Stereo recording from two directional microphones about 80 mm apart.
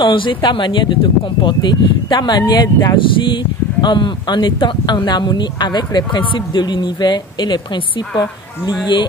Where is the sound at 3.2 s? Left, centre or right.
Left.